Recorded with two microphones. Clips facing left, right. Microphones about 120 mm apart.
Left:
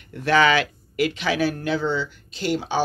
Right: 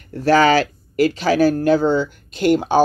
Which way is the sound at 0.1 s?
40° right (ahead or behind).